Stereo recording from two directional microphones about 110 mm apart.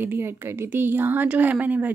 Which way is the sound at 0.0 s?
20° right (ahead or behind).